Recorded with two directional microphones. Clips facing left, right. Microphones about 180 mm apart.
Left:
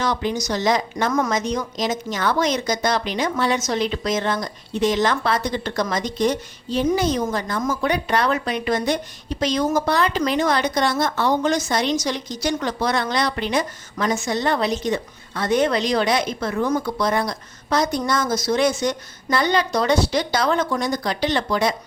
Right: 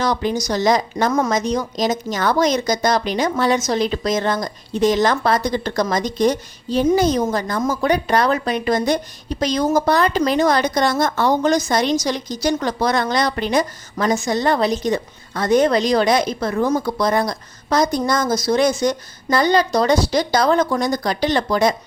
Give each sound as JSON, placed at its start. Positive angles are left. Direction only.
{"t": 0.0, "sound": "a woman's voice", "side_deg": -40}